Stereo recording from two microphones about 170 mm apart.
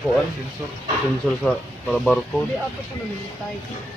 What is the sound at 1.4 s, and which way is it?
Speech, 5° left (ahead or behind).